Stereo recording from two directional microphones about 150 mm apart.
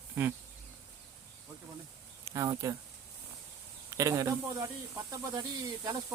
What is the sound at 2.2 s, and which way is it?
Speech, 25° right (ahead or behind).